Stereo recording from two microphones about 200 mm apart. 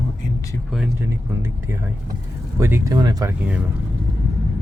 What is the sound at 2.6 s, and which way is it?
Speech, 10° right (ahead or behind).